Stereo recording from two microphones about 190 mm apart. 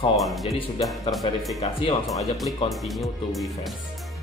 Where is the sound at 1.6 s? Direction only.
25° left (ahead or behind).